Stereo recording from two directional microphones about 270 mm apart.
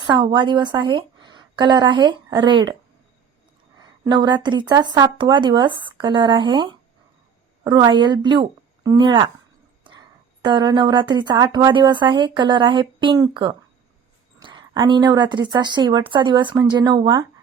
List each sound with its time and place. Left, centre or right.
0.0 s a woman's voice: centre
3.8 s speech: centre
10.4 s speech: centre